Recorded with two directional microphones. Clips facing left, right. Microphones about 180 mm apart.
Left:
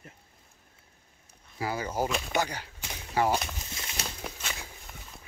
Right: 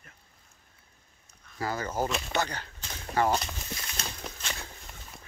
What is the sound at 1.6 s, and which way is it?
Speech, 10° left (ahead or behind).